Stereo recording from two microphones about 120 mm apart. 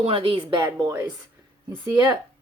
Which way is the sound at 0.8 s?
30° right (ahead or behind).